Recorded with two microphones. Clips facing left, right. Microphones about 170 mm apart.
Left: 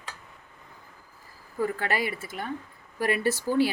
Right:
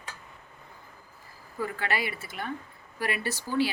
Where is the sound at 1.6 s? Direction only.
45° left (ahead or behind).